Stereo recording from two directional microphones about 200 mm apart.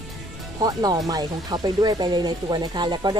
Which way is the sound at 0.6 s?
20° right (ahead or behind).